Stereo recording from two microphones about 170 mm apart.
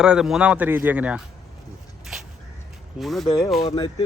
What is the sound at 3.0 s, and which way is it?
Speech, centre (ahead or behind).